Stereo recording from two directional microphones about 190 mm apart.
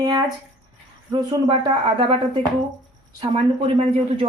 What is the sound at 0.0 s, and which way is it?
Speech, 20° right (ahead or behind).